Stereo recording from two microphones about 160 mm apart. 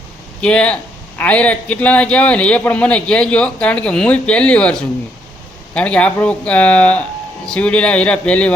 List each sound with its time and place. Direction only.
0.4 s a man's voice: 5° left (ahead or behind)